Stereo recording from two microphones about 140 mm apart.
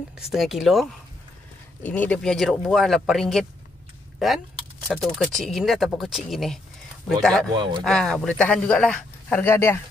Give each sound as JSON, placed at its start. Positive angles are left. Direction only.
{"t": 0.3, "sound": "speech", "side_deg": 0}
{"t": 1.8, "sound": "speech", "side_deg": 10}
{"t": 4.8, "sound": "speech", "side_deg": 0}
{"t": 7.5, "sound": "speech", "side_deg": -35}
{"t": 7.8, "sound": "speech", "side_deg": 5}